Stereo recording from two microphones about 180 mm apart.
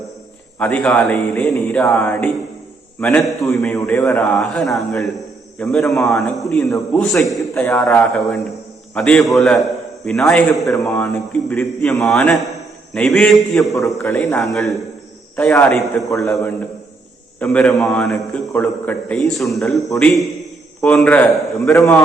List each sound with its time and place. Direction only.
0.6 s a man's voice: 5° left (ahead or behind)
5.8 s a man's voice: 15° left (ahead or behind)
6.1 s a man's voice: 5° left (ahead or behind)
10.8 s a man's voice: 5° left (ahead or behind)
16.0 s a man's voice: 15° left (ahead or behind)